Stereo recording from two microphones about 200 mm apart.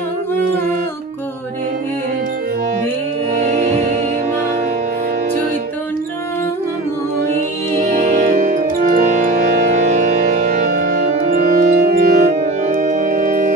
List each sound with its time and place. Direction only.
3.3 s music: 35° right (ahead or behind)
7.8 s music: 35° right (ahead or behind)
11.1 s organ: 45° right (ahead or behind)